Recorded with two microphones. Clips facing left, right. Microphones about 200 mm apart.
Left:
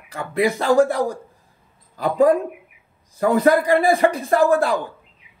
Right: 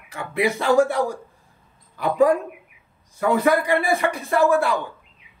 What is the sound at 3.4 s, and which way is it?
Speech, 35° left (ahead or behind).